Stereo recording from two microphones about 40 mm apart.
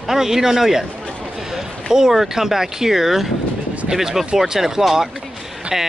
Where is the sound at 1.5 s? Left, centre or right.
Centre.